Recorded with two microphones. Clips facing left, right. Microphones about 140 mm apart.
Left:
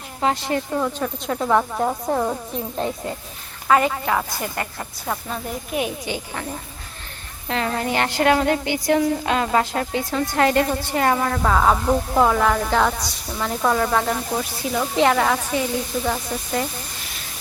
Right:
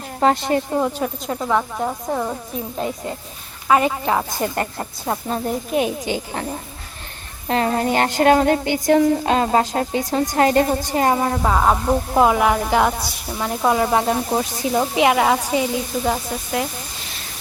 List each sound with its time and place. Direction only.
0.2 s speech: 45° right (ahead or behind)
0.5 s speech: 25° right (ahead or behind)
0.9 s a woman's voice: 10° right (ahead or behind)
1.4 s speech: 5° left (ahead or behind)
3.7 s speech: 20° right (ahead or behind)
4.5 s a woman's voice: 35° right (ahead or behind)
7.4 s a woman's voice: 35° right (ahead or behind)
11.5 s a woman's voice: 10° right (ahead or behind); by 14.8 s 30° right (ahead or behind)
14.9 s a woman's voice: 10° right (ahead or behind)